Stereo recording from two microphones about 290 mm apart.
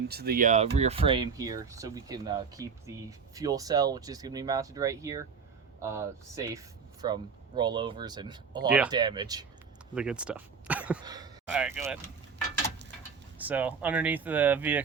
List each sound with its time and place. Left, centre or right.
0.1 s speech: right; by 8.6 s centre
8.7 s speech: centre
9.9 s speech: centre
13.4 s speech: centre